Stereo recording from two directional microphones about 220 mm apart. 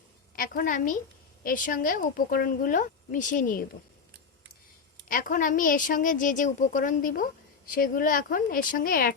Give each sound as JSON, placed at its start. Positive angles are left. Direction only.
{"t": 0.3, "sound": "a woman's voice", "side_deg": 40}
{"t": 5.0, "sound": "a woman's voice", "side_deg": 40}